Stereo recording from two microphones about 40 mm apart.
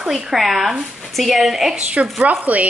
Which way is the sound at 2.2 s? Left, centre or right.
Right.